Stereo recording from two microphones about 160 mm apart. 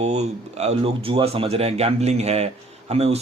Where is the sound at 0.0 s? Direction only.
45° right (ahead or behind).